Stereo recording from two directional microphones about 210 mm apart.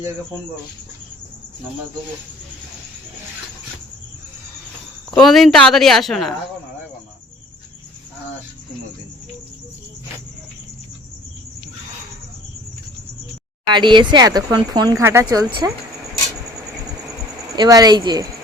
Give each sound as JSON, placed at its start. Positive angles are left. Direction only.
{"t": 5.1, "sound": "speech", "side_deg": 0}
{"t": 13.7, "sound": "speech", "side_deg": -20}
{"t": 17.6, "sound": "speech", "side_deg": -20}